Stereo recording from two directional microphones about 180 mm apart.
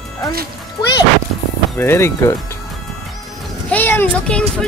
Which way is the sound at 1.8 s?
15° left (ahead or behind).